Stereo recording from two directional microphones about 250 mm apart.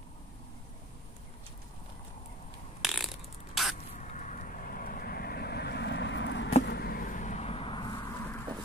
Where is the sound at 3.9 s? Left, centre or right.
Left.